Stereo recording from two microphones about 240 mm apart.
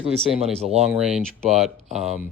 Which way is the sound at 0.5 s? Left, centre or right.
Right.